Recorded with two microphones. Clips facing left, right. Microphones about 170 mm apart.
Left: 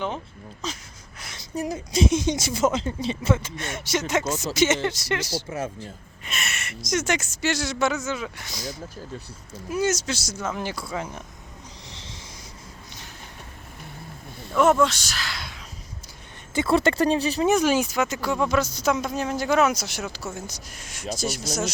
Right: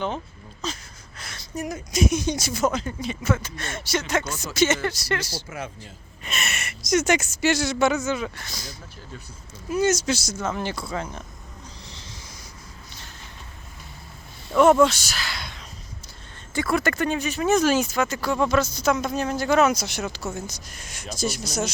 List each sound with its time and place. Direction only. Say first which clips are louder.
1.2 s a sound: right 1 dB; 20° left (ahead or behind)
1.5 s speech: left 1 dB; 30° left (ahead or behind)
5.5 s speech: left 4 dB; 40° left (ahead or behind)
6.2 s speech: right 2 dB; 25° right (ahead or behind)
6.6 s speech: right 5 dB; 5° right (ahead or behind)
8.4 s speech: left 5 dB; 15° left (ahead or behind)
11.9 s owl: left 1 dB; 20° left (ahead or behind)
14.5 s speech: right 3 dB; centre (ahead or behind)
16.6 s speech: left 3 dB; 25° left (ahead or behind)
17.4 s speech: right 2 dB; 15° left (ahead or behind)